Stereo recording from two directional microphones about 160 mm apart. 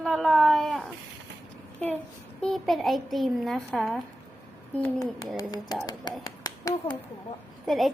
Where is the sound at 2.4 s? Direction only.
Centre (ahead or behind).